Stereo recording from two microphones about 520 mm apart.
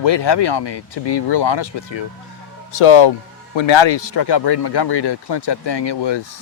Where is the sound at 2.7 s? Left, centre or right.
Left.